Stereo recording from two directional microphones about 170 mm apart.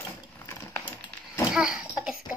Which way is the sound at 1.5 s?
5° right (ahead or behind).